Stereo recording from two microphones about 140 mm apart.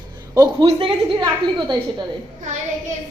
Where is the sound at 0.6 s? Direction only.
40° right (ahead or behind).